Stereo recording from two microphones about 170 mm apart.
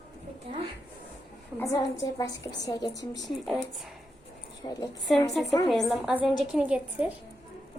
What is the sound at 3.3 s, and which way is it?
Speech, centre (ahead or behind).